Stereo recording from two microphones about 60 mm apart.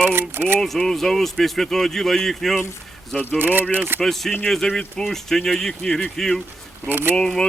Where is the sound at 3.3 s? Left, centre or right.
Right.